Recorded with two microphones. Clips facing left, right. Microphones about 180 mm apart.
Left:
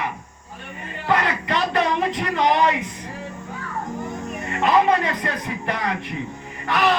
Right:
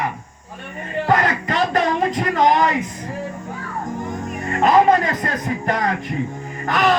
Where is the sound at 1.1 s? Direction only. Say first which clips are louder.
Right 2 dB; 40° right (ahead or behind).